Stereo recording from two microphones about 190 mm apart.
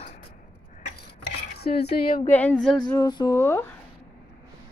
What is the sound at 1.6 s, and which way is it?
Cutlery, 55° left (ahead or behind).